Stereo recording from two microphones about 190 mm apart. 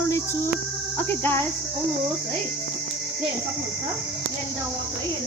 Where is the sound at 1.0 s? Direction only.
10° left (ahead or behind).